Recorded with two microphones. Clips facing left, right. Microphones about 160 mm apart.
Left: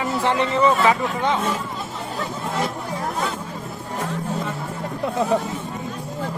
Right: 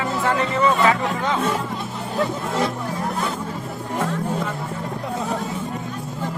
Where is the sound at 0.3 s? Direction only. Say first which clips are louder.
Left 1 dB; 20° left (ahead or behind).